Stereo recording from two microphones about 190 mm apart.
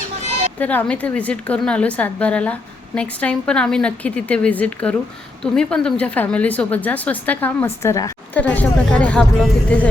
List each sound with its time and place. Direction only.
0.6 s a woman's voice: 10° left (ahead or behind)